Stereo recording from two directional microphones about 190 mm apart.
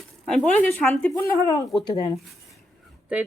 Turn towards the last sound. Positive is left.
turn(degrees=-5)  # may be behind; listen again after turning